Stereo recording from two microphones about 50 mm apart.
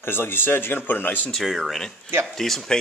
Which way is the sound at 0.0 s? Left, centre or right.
Left.